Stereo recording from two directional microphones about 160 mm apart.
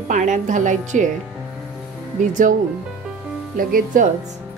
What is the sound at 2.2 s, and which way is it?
Speech, 55° right (ahead or behind).